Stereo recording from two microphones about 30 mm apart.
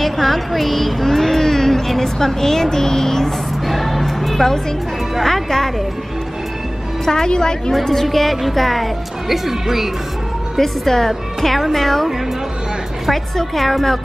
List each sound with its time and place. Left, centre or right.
0.0 s speech: centre
3.6 s music: centre
5.2 s speech: centre
7.2 s a woman's voice: left
7.7 s a woman's voice: centre
9.3 s speech: centre
10.6 s a woman's voice: centre
13.1 s a woman's voice: centre